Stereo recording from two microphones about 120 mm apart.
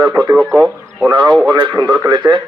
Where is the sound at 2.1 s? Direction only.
40° right (ahead or behind).